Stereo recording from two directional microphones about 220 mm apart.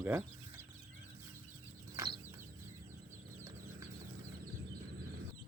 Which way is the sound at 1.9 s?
20° right (ahead or behind).